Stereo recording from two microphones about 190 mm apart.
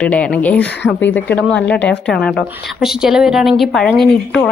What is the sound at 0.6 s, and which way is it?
Speech, 65° left (ahead or behind).